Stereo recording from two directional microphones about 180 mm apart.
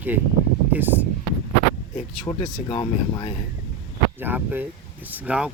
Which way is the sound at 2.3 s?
20° left (ahead or behind).